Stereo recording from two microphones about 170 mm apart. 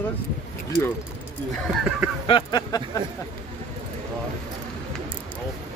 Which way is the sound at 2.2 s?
25° left (ahead or behind).